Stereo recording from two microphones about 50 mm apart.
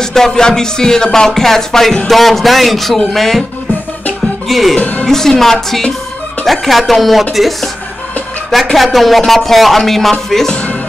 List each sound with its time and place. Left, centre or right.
0.0 s music: centre
2.0 s speech: centre
4.5 s speech: centre
4.7 s speech: left
5.0 s music: centre
6.4 s speech: centre
8.7 s speech: centre
10.3 s music: centre